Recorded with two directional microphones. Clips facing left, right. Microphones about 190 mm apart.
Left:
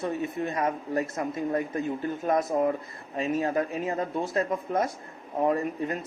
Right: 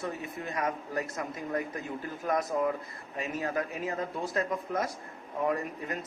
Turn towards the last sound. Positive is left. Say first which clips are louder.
# left 5 dB
turn(degrees=30)  # may be behind; listen again after turning